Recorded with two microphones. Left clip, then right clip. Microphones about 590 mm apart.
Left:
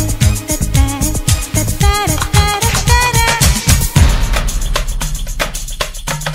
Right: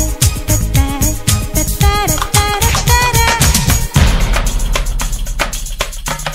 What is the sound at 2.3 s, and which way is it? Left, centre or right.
Music, right.